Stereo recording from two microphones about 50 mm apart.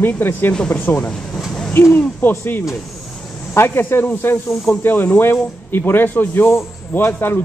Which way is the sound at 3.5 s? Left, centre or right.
Left.